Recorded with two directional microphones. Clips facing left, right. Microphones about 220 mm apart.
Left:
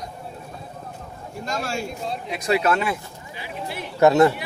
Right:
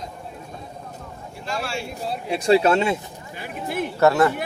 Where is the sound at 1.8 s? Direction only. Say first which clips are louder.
Even; 5° right (ahead or behind).